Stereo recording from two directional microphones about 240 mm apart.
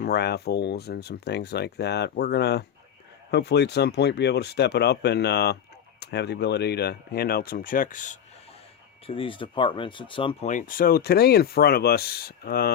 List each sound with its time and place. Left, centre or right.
0.0 s speech: left
9.0 s speech: left